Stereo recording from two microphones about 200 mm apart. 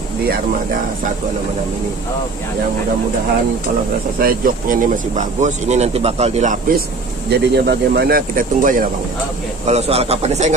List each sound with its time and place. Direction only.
4.2 s speech: 45° right (ahead or behind)
7.2 s speech: 55° right (ahead or behind)
9.7 s speech: 30° right (ahead or behind)